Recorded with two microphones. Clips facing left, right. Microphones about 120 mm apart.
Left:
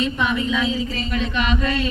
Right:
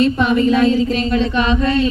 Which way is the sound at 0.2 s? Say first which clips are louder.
Right 8 dB; 60° right (ahead or behind).